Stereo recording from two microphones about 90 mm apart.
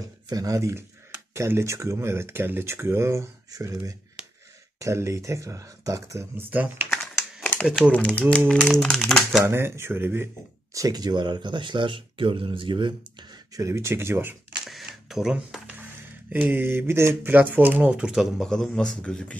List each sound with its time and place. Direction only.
0.3 s speech: 40° right (ahead or behind)
6.3 s speech: 20° right (ahead or behind)
7.9 s speech: 15° left (ahead or behind)
9.4 s speech: 30° right (ahead or behind)
10.7 s speech: 40° right (ahead or behind); by 13.4 s 60° right (ahead or behind)
13.6 s speech: 30° right (ahead or behind)
14.7 s camera: centre (ahead or behind)
16.4 s speech: 25° right (ahead or behind); by 19.3 s 10° left (ahead or behind)